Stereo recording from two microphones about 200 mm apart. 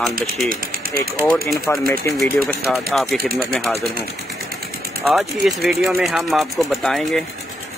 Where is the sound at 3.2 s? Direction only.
50° right (ahead or behind).